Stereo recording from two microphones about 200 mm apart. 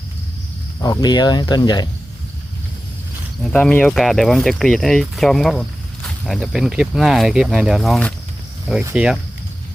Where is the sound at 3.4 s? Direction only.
5° left (ahead or behind).